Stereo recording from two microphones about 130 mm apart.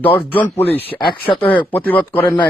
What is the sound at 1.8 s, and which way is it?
Speech, 15° left (ahead or behind).